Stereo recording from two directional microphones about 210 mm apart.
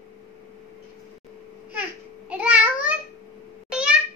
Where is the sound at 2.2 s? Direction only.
5° right (ahead or behind).